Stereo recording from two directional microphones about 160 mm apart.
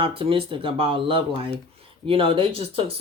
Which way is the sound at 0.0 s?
35° right (ahead or behind).